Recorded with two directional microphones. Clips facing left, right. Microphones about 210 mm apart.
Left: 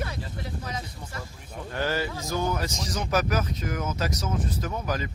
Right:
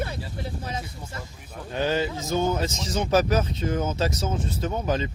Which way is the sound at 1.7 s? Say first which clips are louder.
Right 4 dB; 20° right (ahead or behind).